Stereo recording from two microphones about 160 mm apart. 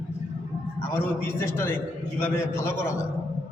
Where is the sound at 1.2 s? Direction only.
15° left (ahead or behind).